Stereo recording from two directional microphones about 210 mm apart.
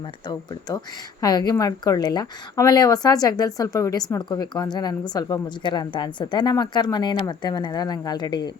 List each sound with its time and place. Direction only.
1.2 s a woman's voice: 20° left (ahead or behind)